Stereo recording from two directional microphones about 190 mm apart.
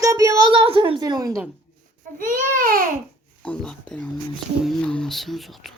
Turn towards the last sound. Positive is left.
turn(degrees=0)  # may be behind; listen again after turning